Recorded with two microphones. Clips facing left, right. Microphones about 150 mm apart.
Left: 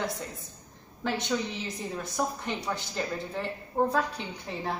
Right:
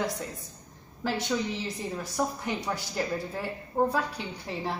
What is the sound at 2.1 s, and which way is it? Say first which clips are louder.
A woman's voice: right 1 dB; 10° right (ahead or behind).